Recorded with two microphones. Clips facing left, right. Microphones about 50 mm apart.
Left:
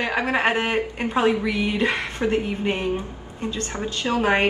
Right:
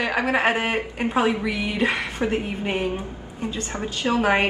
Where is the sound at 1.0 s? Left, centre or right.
Right.